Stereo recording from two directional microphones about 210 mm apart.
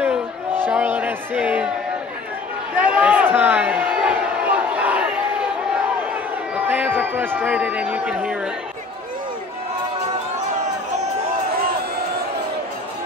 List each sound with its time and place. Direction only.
0.7 s a sound: 10° right (ahead or behind)
2.7 s crowd: 5° right (ahead or behind)
6.5 s speech: 10° right (ahead or behind)